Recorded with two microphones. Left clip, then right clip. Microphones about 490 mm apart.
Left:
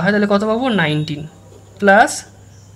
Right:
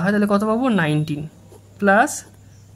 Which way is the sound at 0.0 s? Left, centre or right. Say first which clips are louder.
Left 4 dB; right.